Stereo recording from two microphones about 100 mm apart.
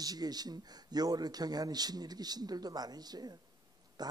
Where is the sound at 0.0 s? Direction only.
40° right (ahead or behind).